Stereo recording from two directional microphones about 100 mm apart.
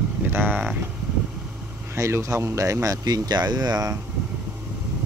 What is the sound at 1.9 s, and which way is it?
Speech, 30° right (ahead or behind).